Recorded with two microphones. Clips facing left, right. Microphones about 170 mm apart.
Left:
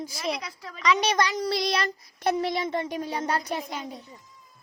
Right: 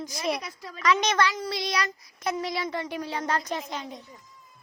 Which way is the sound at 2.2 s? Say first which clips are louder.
Left 4 dB; 60° left (ahead or behind).